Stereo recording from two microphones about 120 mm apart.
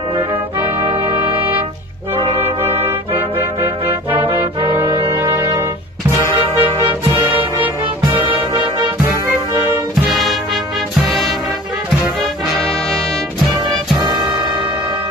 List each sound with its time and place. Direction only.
3.1 s music: 15° right (ahead or behind)
4.8 s brass instrument: 45° right (ahead or behind)
5.3 s music: 30° right (ahead or behind)
11.1 s music: centre (ahead or behind)